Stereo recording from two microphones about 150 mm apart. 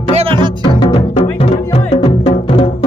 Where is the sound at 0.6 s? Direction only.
35° left (ahead or behind).